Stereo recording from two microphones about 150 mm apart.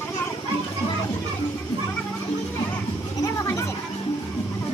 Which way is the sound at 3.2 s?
20° left (ahead or behind).